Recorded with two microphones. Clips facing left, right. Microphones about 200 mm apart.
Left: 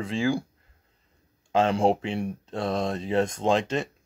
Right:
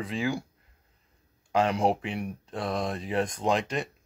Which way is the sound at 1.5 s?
25° left (ahead or behind).